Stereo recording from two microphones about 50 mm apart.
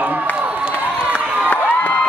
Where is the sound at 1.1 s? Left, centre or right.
Left.